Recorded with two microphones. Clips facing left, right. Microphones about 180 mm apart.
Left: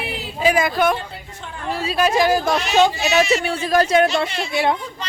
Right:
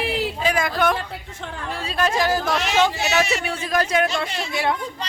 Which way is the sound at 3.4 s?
30° left (ahead or behind).